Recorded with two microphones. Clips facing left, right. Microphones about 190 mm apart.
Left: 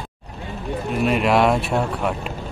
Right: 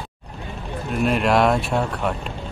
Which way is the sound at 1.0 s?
Centre (ahead or behind).